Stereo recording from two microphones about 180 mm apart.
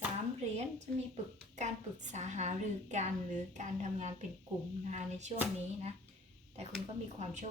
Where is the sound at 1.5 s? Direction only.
40° right (ahead or behind).